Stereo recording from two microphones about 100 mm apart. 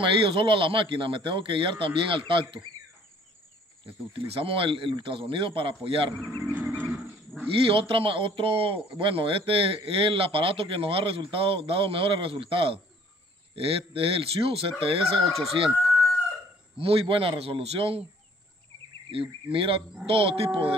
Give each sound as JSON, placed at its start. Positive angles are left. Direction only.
{"t": 0.0, "sound": "speech", "side_deg": -60}
{"t": 3.8, "sound": "speech", "side_deg": -65}
{"t": 6.5, "sound": "wild animals", "side_deg": -15}
{"t": 7.6, "sound": "a man's voice", "side_deg": -65}
{"t": 15.7, "sound": "chicken", "side_deg": -5}
{"t": 16.7, "sound": "a man's voice", "side_deg": -70}
{"t": 19.0, "sound": "a man's voice", "side_deg": -65}